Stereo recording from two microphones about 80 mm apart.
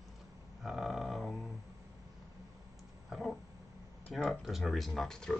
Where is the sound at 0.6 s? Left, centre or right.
Centre.